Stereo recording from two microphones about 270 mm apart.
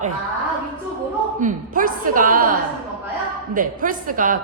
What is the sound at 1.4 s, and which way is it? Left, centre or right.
A woman's voice, right.